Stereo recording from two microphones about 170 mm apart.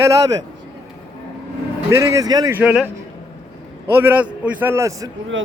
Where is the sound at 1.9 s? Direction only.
15° right (ahead or behind).